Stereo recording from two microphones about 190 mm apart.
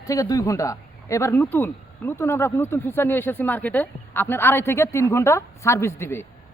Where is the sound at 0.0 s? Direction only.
20° left (ahead or behind).